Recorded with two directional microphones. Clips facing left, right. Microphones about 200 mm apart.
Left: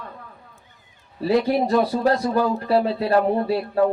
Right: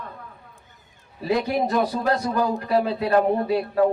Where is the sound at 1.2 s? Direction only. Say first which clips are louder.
Left 3 dB; 35° left (ahead or behind).